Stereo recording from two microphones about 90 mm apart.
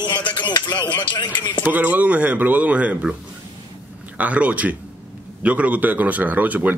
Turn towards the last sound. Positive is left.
turn(degrees=-20)  # may be behind; listen again after turning